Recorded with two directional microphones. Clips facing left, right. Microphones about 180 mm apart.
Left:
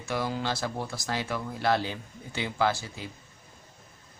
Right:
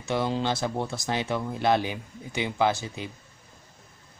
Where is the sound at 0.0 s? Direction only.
25° right (ahead or behind).